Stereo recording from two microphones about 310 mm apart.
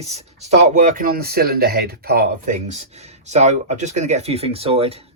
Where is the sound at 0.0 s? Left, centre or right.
Right.